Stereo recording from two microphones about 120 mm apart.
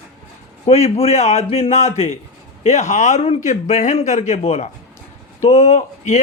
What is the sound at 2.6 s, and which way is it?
A man's voice, 70° left (ahead or behind).